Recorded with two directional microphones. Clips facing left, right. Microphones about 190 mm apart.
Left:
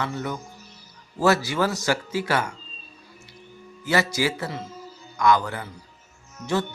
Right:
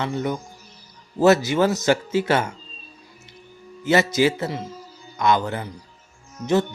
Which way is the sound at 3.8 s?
20° right (ahead or behind).